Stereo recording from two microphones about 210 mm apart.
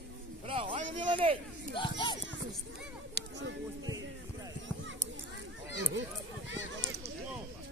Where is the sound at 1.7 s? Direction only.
20° left (ahead or behind).